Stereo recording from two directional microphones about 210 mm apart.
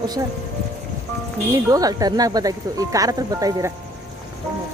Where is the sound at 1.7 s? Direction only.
15° right (ahead or behind).